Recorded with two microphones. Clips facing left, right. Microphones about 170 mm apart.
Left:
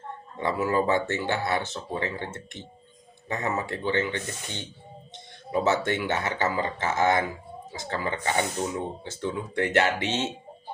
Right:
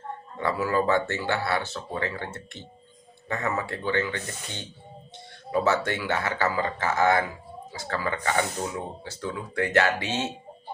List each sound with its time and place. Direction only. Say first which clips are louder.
0.3 s speech: even; 20° left (ahead or behind)